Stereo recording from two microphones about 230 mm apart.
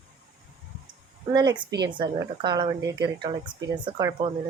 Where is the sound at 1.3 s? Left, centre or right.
Centre.